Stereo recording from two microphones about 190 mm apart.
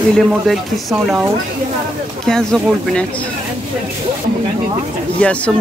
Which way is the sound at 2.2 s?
5° left (ahead or behind).